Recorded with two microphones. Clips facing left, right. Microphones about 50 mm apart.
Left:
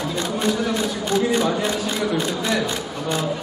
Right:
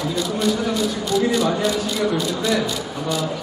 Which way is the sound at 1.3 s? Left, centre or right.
Left.